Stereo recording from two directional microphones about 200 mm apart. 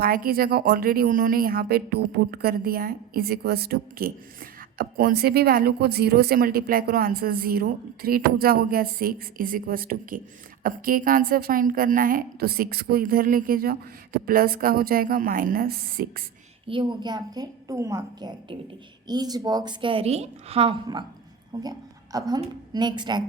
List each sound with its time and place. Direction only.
0.0 s a woman's voice: 45° right (ahead or behind)
16.6 s a woman's voice: 25° right (ahead or behind)